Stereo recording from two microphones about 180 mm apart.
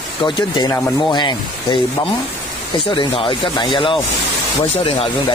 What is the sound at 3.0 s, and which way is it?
Speech, 25° left (ahead or behind).